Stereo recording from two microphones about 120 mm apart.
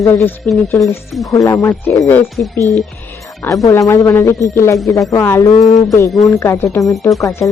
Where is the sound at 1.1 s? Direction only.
Centre (ahead or behind).